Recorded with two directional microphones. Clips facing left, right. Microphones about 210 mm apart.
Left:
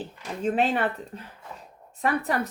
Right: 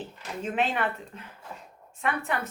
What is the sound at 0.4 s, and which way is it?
Speech, 35° left (ahead or behind).